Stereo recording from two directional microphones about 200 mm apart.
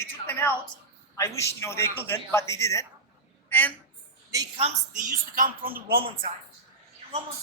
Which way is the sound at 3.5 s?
10° left (ahead or behind).